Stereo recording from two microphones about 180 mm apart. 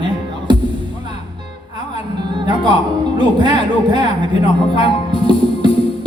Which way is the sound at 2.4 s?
25° right (ahead or behind).